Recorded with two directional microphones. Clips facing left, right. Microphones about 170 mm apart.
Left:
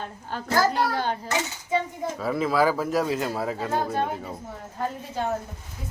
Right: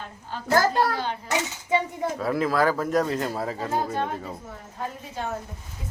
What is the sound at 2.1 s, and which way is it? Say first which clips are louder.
A man's voice: left 1 dB; centre (ahead or behind).